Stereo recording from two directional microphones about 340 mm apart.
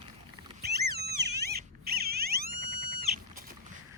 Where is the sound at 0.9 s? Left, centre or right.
Right.